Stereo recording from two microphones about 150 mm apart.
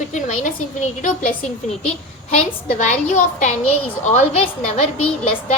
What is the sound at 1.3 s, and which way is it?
Speech, 5° left (ahead or behind).